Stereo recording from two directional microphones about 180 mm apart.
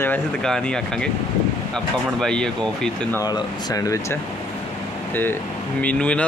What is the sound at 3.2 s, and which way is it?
Speech, 20° left (ahead or behind).